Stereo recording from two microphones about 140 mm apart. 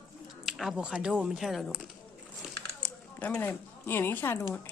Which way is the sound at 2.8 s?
10° left (ahead or behind).